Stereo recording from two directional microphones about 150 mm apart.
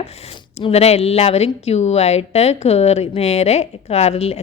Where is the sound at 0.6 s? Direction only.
45° left (ahead or behind).